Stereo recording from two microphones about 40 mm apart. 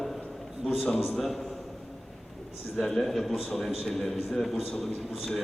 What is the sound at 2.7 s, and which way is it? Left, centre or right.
A man's voice, centre.